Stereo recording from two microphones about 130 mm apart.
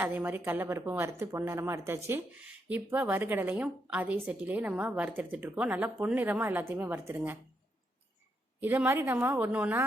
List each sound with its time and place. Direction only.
0.0 s speech: 15° right (ahead or behind)
8.6 s speech: 15° right (ahead or behind)